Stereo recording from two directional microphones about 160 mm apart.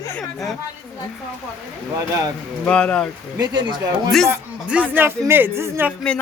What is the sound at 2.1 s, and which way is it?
Speech, 20° right (ahead or behind).